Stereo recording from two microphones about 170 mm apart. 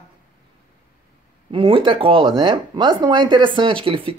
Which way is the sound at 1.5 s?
30° right (ahead or behind).